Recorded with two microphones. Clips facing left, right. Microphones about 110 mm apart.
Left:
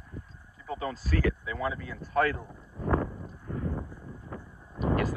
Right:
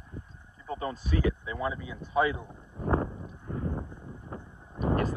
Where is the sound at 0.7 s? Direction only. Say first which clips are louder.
Even; 25° right (ahead or behind).